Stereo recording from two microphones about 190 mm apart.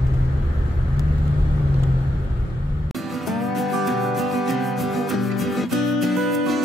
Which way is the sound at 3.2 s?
Centre (ahead or behind).